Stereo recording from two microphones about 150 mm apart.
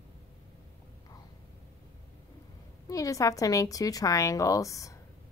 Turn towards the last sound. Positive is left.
turn(degrees=20)  # may be behind; listen again after turning